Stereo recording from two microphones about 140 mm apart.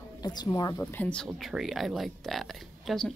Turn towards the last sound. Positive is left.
turn(degrees=0)  # may be behind; listen again after turning